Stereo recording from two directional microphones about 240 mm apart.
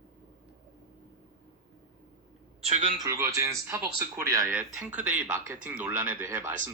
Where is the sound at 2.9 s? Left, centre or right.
Centre.